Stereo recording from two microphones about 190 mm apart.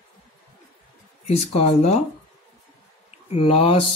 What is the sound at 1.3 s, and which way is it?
Speech, 35° left (ahead or behind).